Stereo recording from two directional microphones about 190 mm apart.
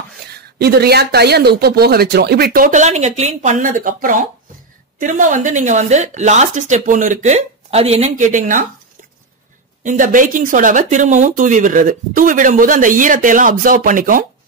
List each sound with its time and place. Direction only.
0.3 s speech: 60° right (ahead or behind); by 8.6 s 45° right (ahead or behind)
9.8 s speech: 45° right (ahead or behind)